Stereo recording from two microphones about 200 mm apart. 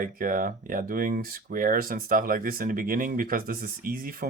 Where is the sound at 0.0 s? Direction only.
45° right (ahead or behind).